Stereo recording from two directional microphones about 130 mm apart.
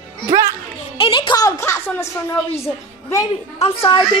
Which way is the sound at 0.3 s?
25° right (ahead or behind).